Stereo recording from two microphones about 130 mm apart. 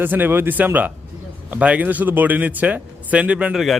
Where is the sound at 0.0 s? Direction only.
15° right (ahead or behind).